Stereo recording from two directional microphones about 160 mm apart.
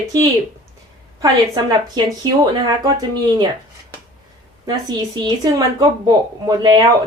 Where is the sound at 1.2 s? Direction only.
25° right (ahead or behind).